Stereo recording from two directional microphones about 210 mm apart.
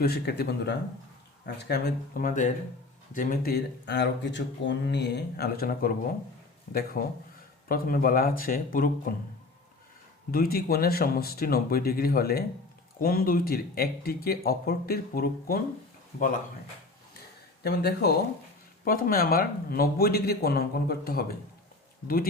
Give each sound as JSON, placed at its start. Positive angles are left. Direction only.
{"t": 0.0, "sound": "speech", "side_deg": 50}
{"t": 7.0, "sound": "speech", "side_deg": 45}
{"t": 10.3, "sound": "speech", "side_deg": 45}
{"t": 17.6, "sound": "speech", "side_deg": 50}